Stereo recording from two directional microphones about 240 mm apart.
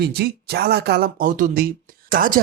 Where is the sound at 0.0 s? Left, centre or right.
Right.